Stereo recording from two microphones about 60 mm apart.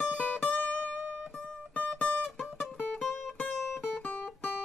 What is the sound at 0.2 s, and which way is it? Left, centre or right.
Music, left.